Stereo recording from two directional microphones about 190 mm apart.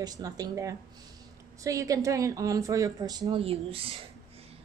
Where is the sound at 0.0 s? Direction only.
20° right (ahead or behind).